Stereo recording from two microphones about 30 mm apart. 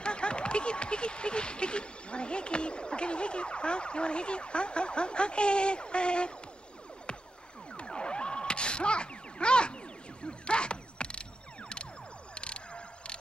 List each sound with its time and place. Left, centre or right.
0.0 s speech: left
7.1 s music: left
7.7 s gasp: left
10.2 s mechanisms: left
12.4 s emergency vehicle: left